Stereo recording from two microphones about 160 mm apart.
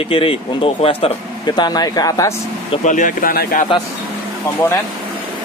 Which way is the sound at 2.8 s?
50° left (ahead or behind).